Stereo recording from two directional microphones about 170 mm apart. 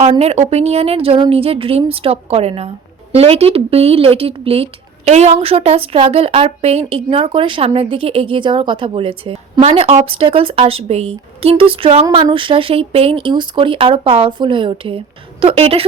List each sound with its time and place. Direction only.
0.2 s speech: 40° right (ahead or behind)